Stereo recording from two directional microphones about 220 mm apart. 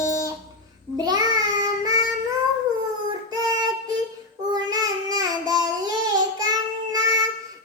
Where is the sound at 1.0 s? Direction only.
15° right (ahead or behind).